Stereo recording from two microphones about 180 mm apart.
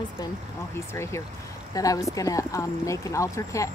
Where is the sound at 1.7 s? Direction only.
20° left (ahead or behind).